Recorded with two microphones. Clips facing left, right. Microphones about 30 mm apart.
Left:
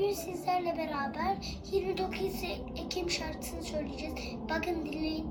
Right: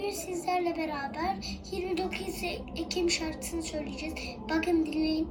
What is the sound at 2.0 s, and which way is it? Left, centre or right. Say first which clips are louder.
A woman's voice: right 1 dB; right.